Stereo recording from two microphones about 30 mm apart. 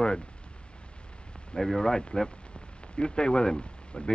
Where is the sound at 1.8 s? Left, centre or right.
Left.